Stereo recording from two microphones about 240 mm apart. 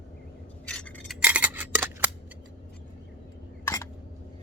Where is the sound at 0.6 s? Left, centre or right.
Centre.